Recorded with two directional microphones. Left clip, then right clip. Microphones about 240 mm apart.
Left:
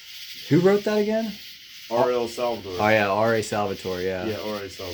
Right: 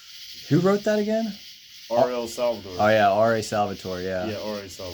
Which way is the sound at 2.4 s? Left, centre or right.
Right.